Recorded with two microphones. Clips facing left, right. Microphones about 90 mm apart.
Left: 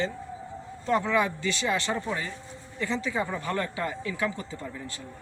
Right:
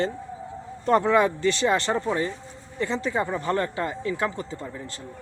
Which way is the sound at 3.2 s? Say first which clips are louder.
Right 5 dB; 25° right (ahead or behind).